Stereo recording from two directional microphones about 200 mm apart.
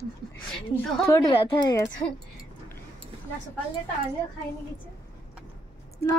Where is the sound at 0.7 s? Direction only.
10° left (ahead or behind).